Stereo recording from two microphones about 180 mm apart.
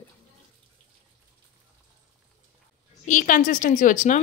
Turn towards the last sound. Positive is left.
turn(degrees=45)  # may be behind; listen again after turning